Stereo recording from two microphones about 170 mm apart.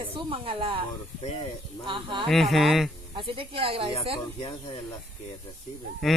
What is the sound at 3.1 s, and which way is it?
Speech, 30° right (ahead or behind).